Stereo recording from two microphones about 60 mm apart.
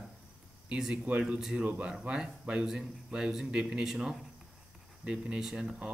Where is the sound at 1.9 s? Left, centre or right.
Centre.